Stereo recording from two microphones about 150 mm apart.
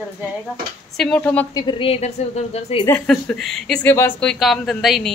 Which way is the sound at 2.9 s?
10° left (ahead or behind).